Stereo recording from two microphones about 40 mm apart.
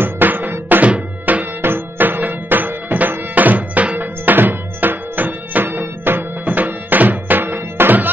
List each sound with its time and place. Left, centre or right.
0.0 s music: right
1.6 s music: right
6.4 s music: right